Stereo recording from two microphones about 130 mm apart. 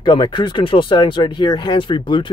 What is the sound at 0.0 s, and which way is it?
Speech, 35° left (ahead or behind).